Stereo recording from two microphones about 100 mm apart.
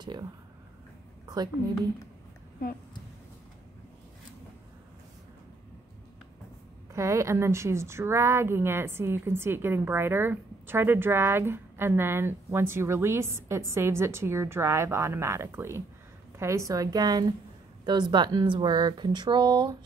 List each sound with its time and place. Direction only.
0.0 s speech: 45° right (ahead or behind)
1.2 s a sound: 40° right (ahead or behind)
6.9 s a woman's voice: 30° right (ahead or behind); by 19.8 s 50° right (ahead or behind)